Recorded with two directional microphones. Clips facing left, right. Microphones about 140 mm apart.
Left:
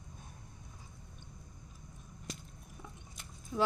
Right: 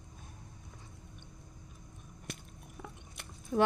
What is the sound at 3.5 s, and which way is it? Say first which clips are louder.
Speech: right 4 dB; 55° right (ahead or behind).